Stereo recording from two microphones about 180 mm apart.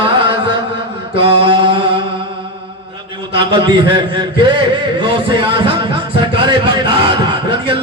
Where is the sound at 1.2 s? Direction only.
30° right (ahead or behind).